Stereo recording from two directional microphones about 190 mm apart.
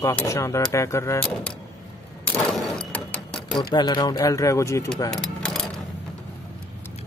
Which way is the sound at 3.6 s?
25° left (ahead or behind).